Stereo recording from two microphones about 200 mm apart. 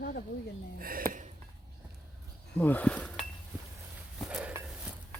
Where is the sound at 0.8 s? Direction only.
45° right (ahead or behind).